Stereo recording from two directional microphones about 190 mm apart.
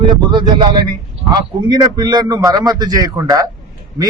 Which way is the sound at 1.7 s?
20° right (ahead or behind).